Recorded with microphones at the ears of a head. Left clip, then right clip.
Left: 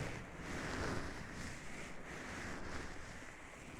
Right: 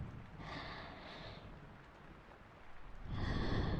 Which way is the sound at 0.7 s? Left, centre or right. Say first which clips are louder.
Left 7 dB; left.